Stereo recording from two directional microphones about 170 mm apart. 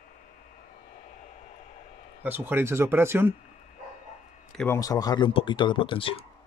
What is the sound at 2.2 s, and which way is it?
Speech, 10° right (ahead or behind).